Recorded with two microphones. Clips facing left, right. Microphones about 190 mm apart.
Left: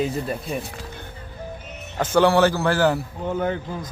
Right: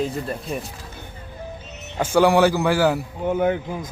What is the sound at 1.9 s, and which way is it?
A man's voice, 10° right (ahead or behind).